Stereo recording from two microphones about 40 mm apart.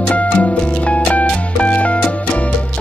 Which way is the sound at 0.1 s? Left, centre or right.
Left.